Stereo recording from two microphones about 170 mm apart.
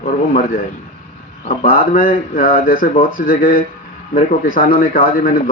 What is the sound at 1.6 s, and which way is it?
Speech, 55° left (ahead or behind).